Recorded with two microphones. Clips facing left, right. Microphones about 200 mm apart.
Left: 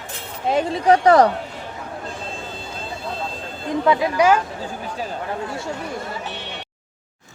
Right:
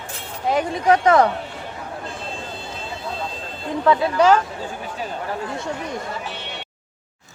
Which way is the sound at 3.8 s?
15° left (ahead or behind).